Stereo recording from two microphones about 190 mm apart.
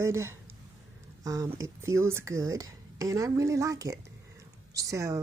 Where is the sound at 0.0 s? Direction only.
15° right (ahead or behind).